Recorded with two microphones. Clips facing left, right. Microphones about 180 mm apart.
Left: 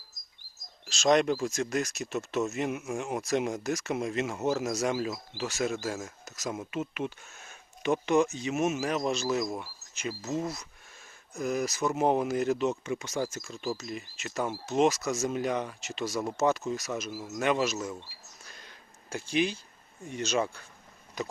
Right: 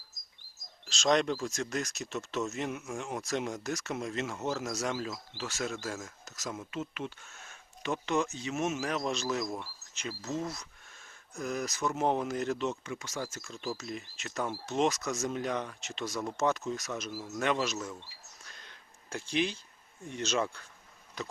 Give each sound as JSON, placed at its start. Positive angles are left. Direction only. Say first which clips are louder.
{"t": 0.9, "sound": "speech", "louder": "left 4 dB", "side_deg": 10}
{"t": 12.8, "sound": "speech", "louder": "left 6 dB", "side_deg": 20}
{"t": 13.5, "sound": "speech", "louder": "left 3 dB", "side_deg": 5}
{"t": 18.4, "sound": "a sound", "louder": "left 4 dB", "side_deg": 5}
{"t": 20.1, "sound": "speech", "louder": "left 2 dB", "side_deg": 10}